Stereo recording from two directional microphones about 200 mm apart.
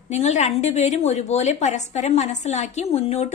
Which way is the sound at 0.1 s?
35° left (ahead or behind).